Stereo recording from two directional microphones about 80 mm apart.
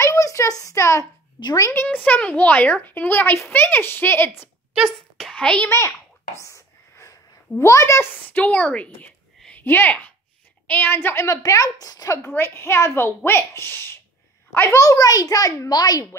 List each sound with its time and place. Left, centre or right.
0.0 s a sound: left
1.6 s a woman's voice: left
1.9 s a woman's voice: left
4.9 s a child's voice: centre
5.7 s a sound: left
8.3 s a woman's voice: centre; by 12.3 s left
12.3 s a woman's voice: left
14.8 s a child's voice: left